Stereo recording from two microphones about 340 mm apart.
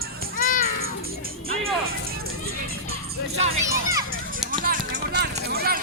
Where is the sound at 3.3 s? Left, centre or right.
Centre.